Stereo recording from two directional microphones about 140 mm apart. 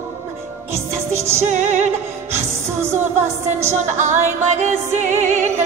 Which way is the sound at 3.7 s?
60° right (ahead or behind).